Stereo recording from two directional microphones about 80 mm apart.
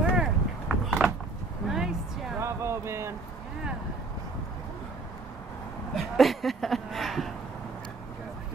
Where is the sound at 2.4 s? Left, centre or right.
Right.